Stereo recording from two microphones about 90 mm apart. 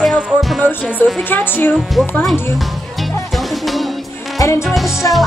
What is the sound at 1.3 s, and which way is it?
Speech, 20° left (ahead or behind).